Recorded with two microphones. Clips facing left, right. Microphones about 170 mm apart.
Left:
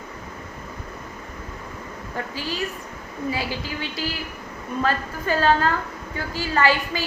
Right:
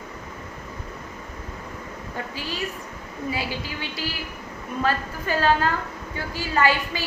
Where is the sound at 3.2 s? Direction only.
40° left (ahead or behind).